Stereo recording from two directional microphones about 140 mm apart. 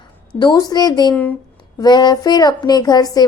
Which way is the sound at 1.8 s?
30° left (ahead or behind).